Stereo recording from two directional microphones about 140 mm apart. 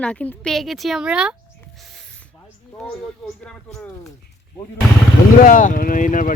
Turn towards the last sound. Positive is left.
turn(degrees=70)  # may be behind; listen again after turning